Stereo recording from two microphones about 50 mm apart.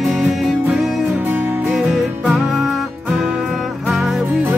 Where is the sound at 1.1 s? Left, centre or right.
Right.